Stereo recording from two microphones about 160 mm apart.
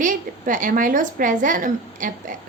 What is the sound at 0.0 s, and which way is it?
A woman's voice, 55° right (ahead or behind).